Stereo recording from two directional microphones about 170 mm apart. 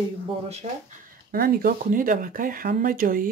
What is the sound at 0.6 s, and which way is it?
Speech, 45° right (ahead or behind).